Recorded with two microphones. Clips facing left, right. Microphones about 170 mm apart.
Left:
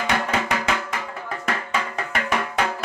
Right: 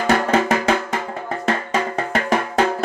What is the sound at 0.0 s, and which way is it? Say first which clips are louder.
Music: right 7 dB; 45° right (ahead or behind).